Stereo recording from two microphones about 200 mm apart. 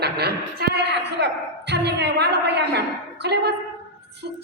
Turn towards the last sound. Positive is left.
turn(degrees=-55)  # may be behind; listen again after turning